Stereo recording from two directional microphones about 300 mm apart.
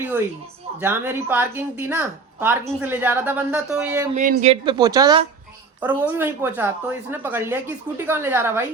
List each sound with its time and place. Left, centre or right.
0.8 s a woman's voice: centre
4.1 s a woman's voice: right; by 8.6 s centre